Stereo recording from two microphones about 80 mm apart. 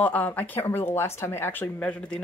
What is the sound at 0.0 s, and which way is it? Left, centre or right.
A woman's voice, left.